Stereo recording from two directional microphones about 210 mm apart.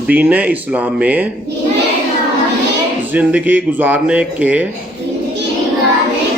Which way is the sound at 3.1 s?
5° right (ahead or behind).